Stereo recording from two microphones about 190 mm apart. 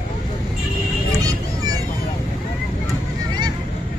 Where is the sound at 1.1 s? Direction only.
20° right (ahead or behind).